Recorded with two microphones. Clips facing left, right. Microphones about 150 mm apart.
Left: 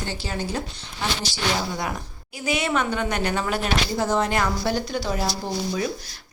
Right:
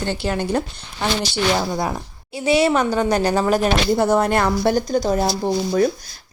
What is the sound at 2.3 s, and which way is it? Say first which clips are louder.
A woman's voice: right 8 dB; 30° right (ahead or behind).